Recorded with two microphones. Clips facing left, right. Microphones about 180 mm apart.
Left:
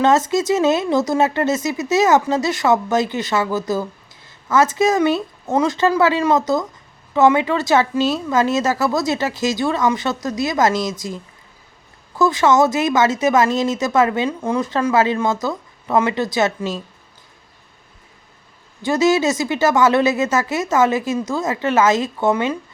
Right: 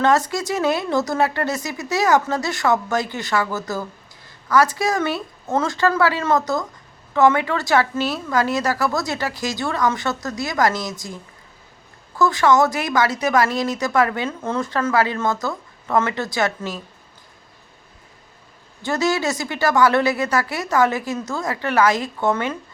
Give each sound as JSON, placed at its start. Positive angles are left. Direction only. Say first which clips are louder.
{"t": 0.0, "sound": "a woman's voice", "louder": "left 3 dB", "side_deg": 20}
{"t": 12.1, "sound": "a woman's voice", "louder": "left 2 dB", "side_deg": 20}
{"t": 18.9, "sound": "a woman's voice", "louder": "left 5 dB", "side_deg": 20}